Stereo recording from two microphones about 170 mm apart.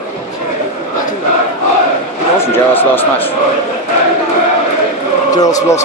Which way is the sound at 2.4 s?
15° left (ahead or behind).